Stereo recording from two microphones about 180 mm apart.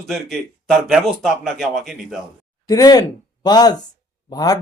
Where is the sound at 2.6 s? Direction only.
20° left (ahead or behind).